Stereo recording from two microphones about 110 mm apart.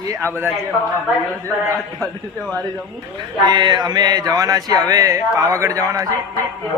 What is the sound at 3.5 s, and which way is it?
Speech, 40° right (ahead or behind).